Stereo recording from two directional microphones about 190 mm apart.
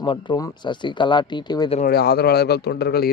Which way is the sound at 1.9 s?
55° left (ahead or behind).